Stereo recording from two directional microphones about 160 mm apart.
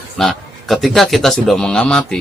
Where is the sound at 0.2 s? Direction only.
Centre (ahead or behind).